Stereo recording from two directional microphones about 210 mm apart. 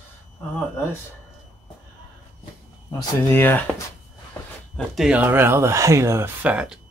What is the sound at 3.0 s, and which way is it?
Speech, 10° left (ahead or behind).